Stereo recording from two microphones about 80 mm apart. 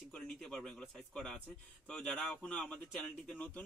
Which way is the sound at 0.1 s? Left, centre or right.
Centre.